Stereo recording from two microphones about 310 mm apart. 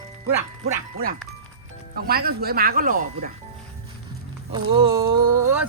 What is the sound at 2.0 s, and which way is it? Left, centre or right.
Speech, right.